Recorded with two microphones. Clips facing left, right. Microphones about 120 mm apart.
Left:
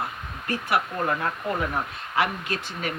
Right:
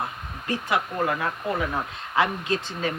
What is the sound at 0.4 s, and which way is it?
Speech, 20° right (ahead or behind).